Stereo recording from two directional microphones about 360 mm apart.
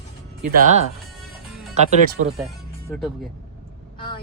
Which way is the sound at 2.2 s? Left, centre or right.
Right.